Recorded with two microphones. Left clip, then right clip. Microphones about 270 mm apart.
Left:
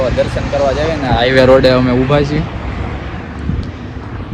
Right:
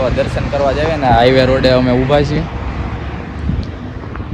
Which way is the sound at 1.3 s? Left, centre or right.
Centre.